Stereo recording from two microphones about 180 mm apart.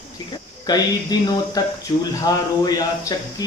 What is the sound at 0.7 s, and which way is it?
Speech, 20° left (ahead or behind).